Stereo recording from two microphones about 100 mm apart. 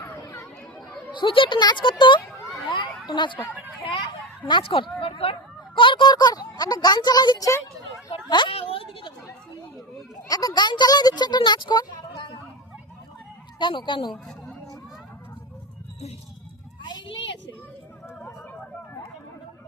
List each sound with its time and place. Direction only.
0.1 s chatter: 25° left (ahead or behind)
1.1 s speech: 55° left (ahead or behind)
2.6 s a sound: 55° left (ahead or behind)
3.1 s speech: 55° left (ahead or behind)
4.4 s speech: 55° left (ahead or behind); by 7.6 s 35° left (ahead or behind)
8.3 s speech: 50° left (ahead or behind)
8.5 s a woman's voice: 65° left (ahead or behind)
10.2 s speech: 40° left (ahead or behind)
13.6 s speech: 55° left (ahead or behind)
14.1 s speech: 5° left (ahead or behind)